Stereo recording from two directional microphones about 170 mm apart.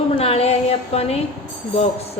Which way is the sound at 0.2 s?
35° left (ahead or behind).